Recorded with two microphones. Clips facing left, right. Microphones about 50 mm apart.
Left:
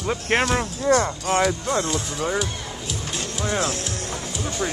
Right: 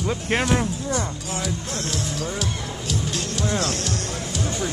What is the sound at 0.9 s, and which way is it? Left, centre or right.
Speech, left.